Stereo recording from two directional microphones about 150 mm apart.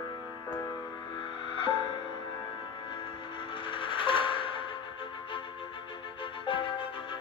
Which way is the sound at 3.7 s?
35° left (ahead or behind).